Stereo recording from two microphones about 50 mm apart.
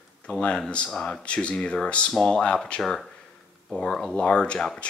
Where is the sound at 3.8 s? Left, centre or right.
Centre.